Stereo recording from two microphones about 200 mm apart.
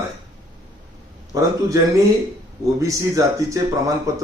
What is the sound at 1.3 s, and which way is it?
Speech, 15° right (ahead or behind).